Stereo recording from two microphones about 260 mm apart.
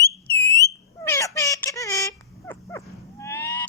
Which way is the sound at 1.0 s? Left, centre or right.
Centre.